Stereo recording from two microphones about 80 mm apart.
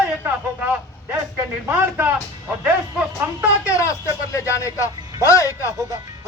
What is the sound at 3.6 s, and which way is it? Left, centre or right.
Speech, left.